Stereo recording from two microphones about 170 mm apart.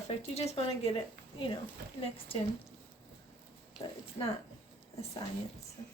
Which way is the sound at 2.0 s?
35° left (ahead or behind).